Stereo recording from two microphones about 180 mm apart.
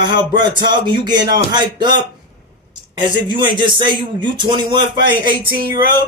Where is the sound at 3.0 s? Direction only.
25° right (ahead or behind).